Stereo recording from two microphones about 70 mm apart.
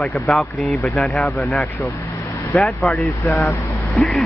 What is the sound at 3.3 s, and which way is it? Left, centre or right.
Speech, left.